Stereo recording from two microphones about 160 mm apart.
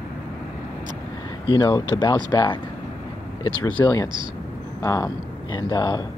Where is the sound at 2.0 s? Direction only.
30° left (ahead or behind).